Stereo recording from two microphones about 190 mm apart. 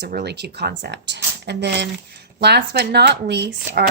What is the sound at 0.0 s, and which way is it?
Speech, 60° right (ahead or behind).